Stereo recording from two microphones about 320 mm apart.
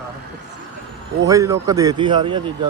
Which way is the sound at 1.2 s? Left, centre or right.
Centre.